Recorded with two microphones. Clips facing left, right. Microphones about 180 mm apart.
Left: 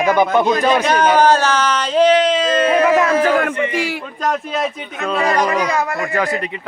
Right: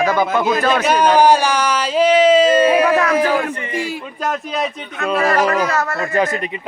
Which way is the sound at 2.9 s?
25° left (ahead or behind).